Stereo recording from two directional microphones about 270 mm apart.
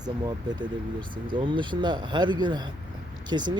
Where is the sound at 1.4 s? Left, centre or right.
Centre.